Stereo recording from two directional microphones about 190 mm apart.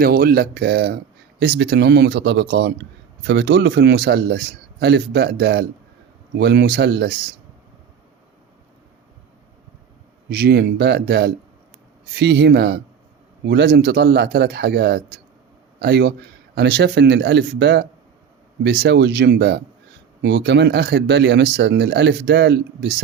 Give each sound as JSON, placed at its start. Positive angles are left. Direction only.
{"t": 0.0, "sound": "speech", "side_deg": -50}
{"t": 10.2, "sound": "speech", "side_deg": -60}